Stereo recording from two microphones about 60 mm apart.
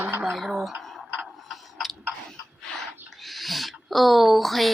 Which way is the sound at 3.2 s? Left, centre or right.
Centre.